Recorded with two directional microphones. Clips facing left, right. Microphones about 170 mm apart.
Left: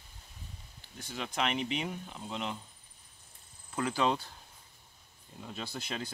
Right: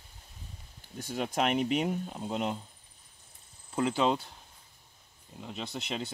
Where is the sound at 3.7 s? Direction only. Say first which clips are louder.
Right 3 dB; 25° right (ahead or behind).